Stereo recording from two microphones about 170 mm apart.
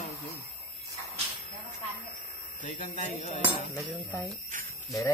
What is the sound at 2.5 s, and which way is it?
Speech, 50° left (ahead or behind).